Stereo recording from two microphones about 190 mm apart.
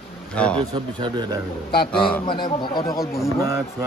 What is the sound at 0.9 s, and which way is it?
Speech, 25° right (ahead or behind).